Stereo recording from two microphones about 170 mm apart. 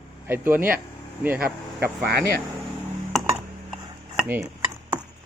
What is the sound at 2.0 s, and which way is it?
Speech, 60° right (ahead or behind).